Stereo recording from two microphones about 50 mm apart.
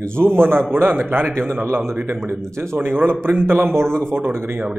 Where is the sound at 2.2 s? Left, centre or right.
Right.